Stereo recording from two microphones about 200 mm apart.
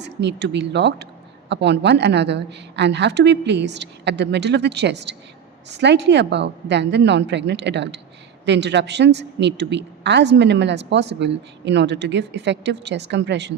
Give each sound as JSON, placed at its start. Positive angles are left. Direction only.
{"t": 0.0, "sound": "a woman's voice", "side_deg": -60}